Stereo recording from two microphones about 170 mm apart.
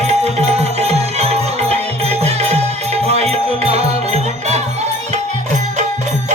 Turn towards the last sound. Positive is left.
turn(degrees=-40)  # may be behind; listen again after turning